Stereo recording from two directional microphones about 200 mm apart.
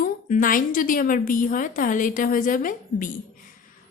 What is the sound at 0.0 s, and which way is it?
A woman's voice, 45° left (ahead or behind).